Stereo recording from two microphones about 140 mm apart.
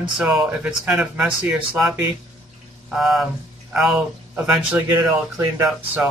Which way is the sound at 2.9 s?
Centre (ahead or behind).